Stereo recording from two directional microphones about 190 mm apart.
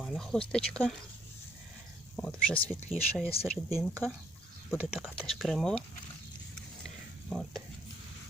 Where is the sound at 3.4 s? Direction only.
30° left (ahead or behind).